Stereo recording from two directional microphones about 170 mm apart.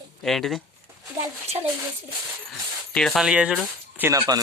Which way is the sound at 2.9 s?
Centre (ahead or behind).